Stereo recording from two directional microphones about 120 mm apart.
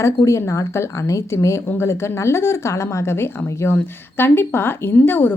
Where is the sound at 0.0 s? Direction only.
25° left (ahead or behind).